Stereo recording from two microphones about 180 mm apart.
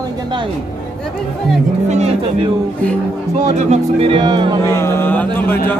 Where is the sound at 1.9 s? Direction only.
40° right (ahead or behind).